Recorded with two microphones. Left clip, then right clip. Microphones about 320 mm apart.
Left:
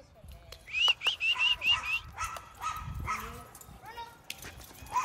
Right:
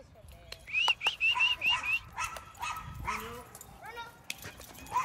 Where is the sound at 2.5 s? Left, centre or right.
Right.